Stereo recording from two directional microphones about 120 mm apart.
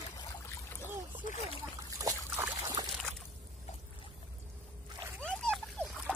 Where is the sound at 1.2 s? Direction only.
90° left.